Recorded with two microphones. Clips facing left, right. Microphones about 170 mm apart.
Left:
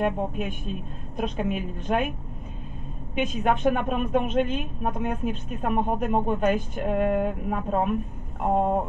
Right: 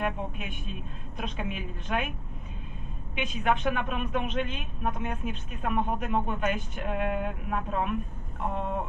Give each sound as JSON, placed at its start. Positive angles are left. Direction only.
{"t": 0.0, "sound": "speech", "side_deg": 45}
{"t": 3.2, "sound": "speech", "side_deg": 45}